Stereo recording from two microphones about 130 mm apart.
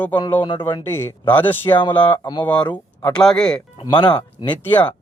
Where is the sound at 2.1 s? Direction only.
35° left (ahead or behind).